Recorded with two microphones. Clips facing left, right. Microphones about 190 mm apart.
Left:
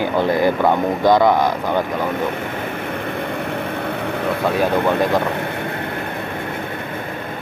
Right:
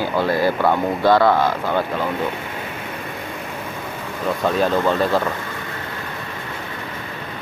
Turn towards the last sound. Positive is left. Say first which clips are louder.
# left 6 dB
turn(degrees=60)  # may be behind; listen again after turning